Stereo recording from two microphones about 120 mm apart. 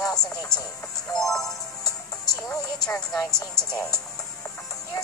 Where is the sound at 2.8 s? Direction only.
5° left (ahead or behind).